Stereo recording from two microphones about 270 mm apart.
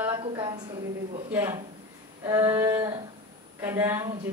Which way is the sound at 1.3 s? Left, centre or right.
Centre.